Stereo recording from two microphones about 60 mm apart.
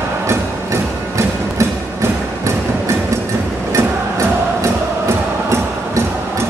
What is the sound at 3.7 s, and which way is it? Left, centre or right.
Music, right.